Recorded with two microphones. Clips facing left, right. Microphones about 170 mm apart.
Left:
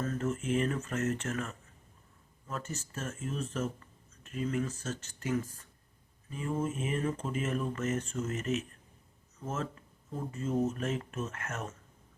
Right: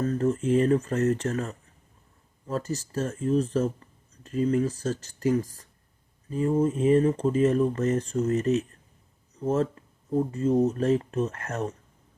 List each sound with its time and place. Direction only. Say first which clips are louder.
0.0 s speech: right 8 dB; 35° right (ahead or behind)